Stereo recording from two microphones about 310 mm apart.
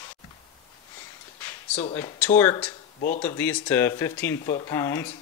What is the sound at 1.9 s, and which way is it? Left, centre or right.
Speech, centre.